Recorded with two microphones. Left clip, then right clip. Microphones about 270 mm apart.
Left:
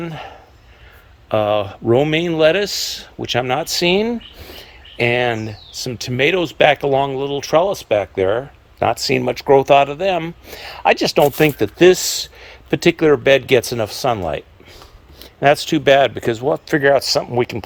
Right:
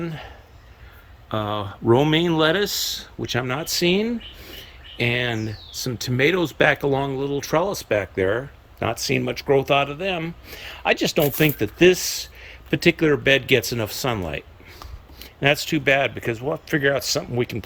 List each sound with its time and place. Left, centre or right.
0.0 s speech: centre